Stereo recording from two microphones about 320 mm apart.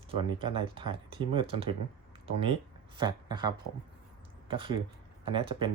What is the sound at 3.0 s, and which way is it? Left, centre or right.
Speech, centre.